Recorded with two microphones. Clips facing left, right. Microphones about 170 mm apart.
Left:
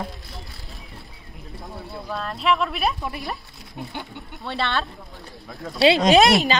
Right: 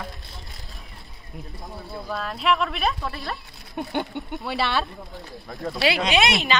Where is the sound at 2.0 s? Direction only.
Centre (ahead or behind).